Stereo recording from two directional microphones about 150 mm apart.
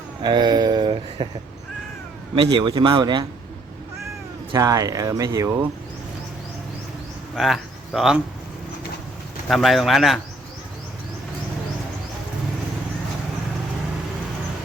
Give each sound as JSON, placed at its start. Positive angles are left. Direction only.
{"t": 0.2, "sound": "speech", "side_deg": -30}
{"t": 2.3, "sound": "speech", "side_deg": -30}
{"t": 4.5, "sound": "speech", "side_deg": -20}
{"t": 7.3, "sound": "speech", "side_deg": 0}
{"t": 9.5, "sound": "speech", "side_deg": 0}